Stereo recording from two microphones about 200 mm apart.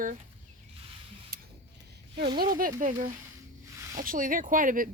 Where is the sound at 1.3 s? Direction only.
45° right (ahead or behind).